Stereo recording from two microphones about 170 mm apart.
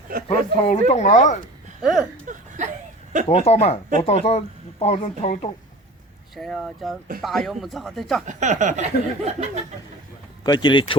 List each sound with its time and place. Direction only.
0.3 s speech: 35° left (ahead or behind)
1.8 s speech: 5° right (ahead or behind)
2.2 s a sound: 50° right (ahead or behind)
3.2 s speech: 35° left (ahead or behind)
6.3 s speech: centre (ahead or behind)
8.3 s a sound: 45° right (ahead or behind)
10.4 s speech: 25° left (ahead or behind)